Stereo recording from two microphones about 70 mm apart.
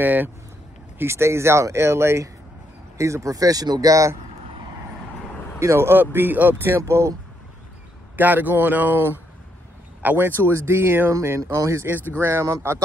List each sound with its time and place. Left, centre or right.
0.0 s speech: right
0.9 s speech: right
3.9 s speech: right
5.6 s speech: right
6.8 s speech: right
8.2 s speech: right
11.4 s speech: right
12.1 s speech: right